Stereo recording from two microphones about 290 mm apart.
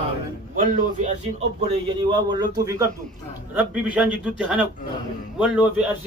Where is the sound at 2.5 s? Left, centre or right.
Centre.